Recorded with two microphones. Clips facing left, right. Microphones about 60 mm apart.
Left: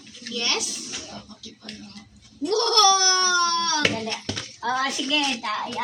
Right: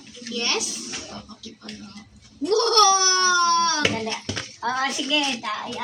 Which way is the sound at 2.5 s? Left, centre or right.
Right.